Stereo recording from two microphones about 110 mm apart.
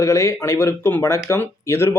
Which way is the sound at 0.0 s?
25° left (ahead or behind).